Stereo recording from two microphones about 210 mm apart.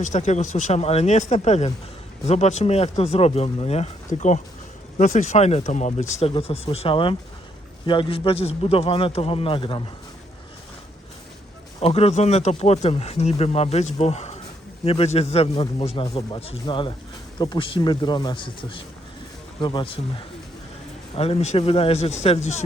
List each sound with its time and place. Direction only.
0.0 s speech: 35° left (ahead or behind)
11.8 s speech: 30° left (ahead or behind)